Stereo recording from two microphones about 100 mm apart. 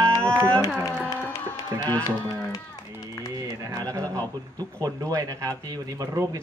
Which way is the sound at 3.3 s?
35° right (ahead or behind).